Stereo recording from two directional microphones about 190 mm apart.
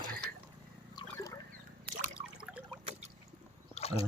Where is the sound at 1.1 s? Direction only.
15° left (ahead or behind).